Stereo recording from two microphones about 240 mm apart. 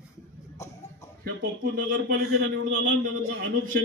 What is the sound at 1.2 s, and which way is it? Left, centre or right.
A man's voice, right.